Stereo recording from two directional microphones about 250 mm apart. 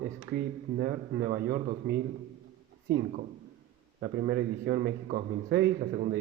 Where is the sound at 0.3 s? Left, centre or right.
Right.